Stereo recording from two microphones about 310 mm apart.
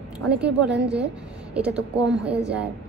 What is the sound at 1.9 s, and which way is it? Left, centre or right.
Speech, centre.